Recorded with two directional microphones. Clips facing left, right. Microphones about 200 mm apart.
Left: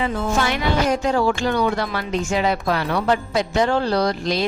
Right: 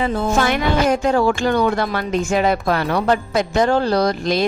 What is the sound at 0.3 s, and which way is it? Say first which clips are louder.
Speech: right 3 dB; 50° right (ahead or behind).